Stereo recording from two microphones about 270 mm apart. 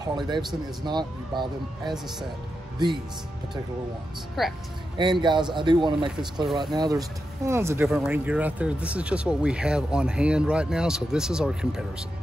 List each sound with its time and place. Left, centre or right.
0.0 s speech: centre
4.4 s speech: centre
4.9 s speech: centre